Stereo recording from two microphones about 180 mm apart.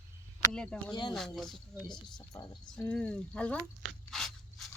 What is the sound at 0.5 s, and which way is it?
A woman's voice, 5° left (ahead or behind).